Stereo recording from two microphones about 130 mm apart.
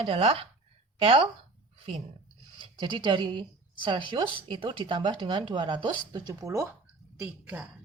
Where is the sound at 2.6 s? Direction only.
35° right (ahead or behind).